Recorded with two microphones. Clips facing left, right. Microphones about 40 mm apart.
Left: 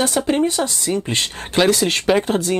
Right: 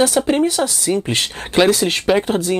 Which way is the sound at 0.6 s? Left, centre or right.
Right.